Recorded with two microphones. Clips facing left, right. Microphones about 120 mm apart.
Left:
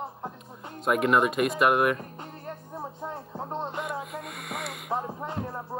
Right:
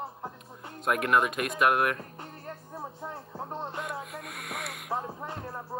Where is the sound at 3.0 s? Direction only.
20° left (ahead or behind).